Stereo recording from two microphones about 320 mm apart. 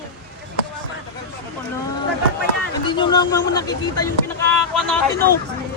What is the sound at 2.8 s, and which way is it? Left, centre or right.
A man's voice, centre.